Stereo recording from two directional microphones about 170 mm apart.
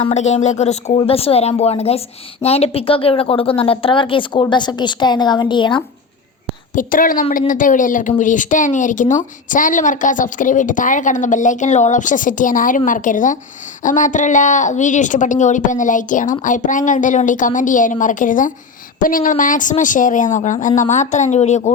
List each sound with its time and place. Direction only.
0.0 s a woman's voice: 40° left (ahead or behind)
6.7 s speech: 55° left (ahead or behind)